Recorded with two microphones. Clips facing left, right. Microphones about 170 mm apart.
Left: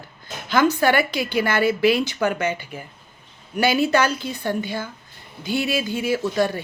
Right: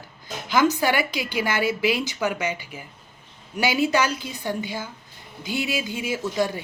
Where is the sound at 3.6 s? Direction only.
15° right (ahead or behind).